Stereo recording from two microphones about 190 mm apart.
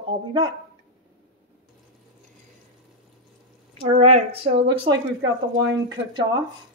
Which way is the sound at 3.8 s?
35° right (ahead or behind).